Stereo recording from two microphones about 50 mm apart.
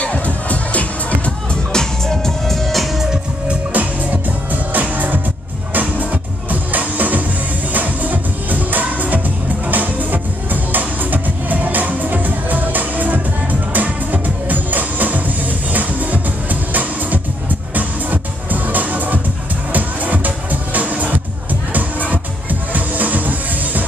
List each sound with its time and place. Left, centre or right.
0.0 s music: left
1.7 s music: centre
3.4 s music: right
22.1 s music: right